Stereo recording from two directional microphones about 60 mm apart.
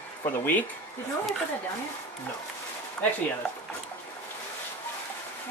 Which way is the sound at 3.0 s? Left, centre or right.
Centre.